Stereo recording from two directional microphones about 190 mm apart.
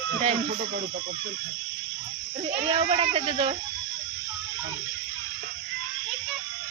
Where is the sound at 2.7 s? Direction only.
30° right (ahead or behind).